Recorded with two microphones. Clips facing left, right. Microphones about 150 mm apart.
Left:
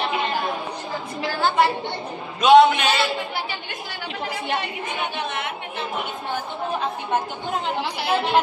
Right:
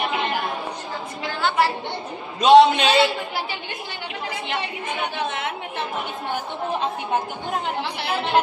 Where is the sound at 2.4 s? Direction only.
30° right (ahead or behind).